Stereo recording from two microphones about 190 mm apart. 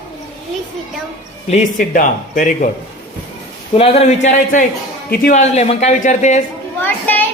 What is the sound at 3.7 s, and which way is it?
A man's voice, 30° left (ahead or behind).